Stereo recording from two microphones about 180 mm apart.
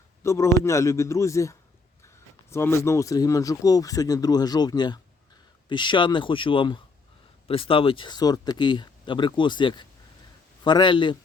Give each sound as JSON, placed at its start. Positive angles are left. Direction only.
{"t": 0.2, "sound": "a man's voice", "side_deg": 15}